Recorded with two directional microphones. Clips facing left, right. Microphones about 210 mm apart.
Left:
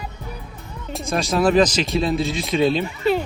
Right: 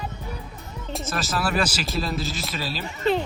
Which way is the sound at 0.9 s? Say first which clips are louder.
Left 6 dB; centre (ahead or behind).